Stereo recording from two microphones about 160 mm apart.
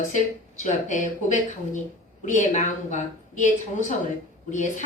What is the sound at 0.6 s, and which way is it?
Speech, 50° left (ahead or behind).